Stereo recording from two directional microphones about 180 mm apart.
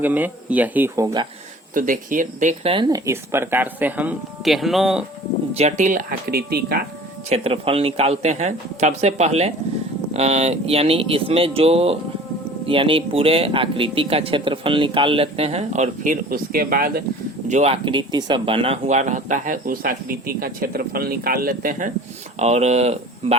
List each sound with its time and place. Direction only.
0.0 s speech: 10° right (ahead or behind)
1.7 s speech: 50° right (ahead or behind)
2.7 s speech: 25° right (ahead or behind)
3.1 s speech: 15° right (ahead or behind)
5.5 s speech: 40° right (ahead or behind); by 6.8 s 60° right (ahead or behind)
7.3 s speech: 35° right (ahead or behind); by 17.0 s 55° right (ahead or behind)
17.5 s speech: 35° right (ahead or behind)
22.4 s speech: 35° right (ahead or behind)